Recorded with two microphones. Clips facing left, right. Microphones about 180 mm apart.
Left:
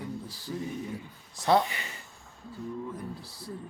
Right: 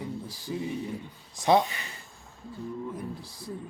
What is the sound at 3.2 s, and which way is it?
Speech, 10° left (ahead or behind).